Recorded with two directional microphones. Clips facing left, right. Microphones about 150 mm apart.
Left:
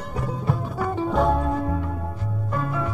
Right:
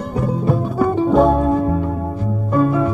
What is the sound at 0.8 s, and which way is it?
Music, 25° right (ahead or behind).